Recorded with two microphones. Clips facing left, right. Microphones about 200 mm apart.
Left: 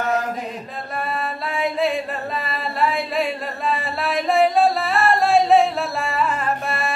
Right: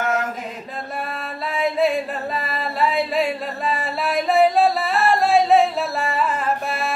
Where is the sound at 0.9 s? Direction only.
Centre (ahead or behind).